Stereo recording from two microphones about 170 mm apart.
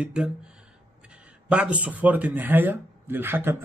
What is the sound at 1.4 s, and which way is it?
A man's voice, 5° right (ahead or behind).